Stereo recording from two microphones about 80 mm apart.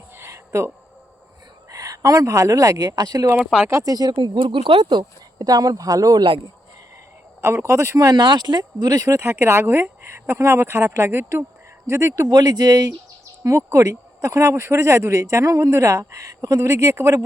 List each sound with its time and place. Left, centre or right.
0.3 s a sound: right
1.7 s speech: right
3.4 s speech: centre
3.7 s speech: right
3.9 s speech: right
6.1 s speech: right
7.4 s speech: right
8.1 s speech: right
9.0 s speech: right
12.3 s speech: right
13.4 s speech: right